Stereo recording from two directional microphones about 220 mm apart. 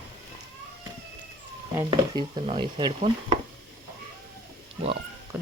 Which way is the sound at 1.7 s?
15° right (ahead or behind).